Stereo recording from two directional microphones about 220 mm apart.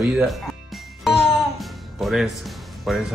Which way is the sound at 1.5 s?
Centre (ahead or behind).